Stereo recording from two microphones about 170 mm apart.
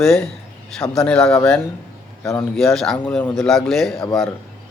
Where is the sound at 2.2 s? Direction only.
15° left (ahead or behind).